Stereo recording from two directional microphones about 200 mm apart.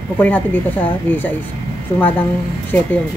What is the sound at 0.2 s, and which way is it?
Speech, 10° left (ahead or behind).